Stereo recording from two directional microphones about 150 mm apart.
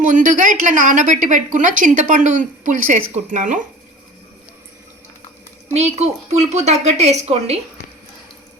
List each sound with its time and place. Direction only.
0.0 s speech: 60° right (ahead or behind)
5.7 s a woman's voice: 45° right (ahead or behind)